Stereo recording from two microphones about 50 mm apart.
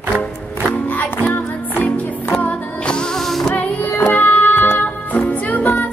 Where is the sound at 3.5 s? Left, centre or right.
Left.